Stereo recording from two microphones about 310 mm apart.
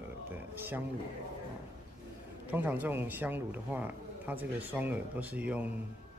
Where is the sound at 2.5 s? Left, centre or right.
Centre.